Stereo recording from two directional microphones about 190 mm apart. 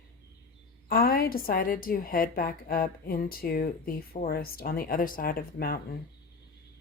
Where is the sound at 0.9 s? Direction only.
50° left (ahead or behind).